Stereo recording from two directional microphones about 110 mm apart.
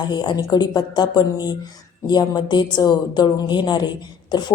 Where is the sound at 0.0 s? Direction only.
40° left (ahead or behind).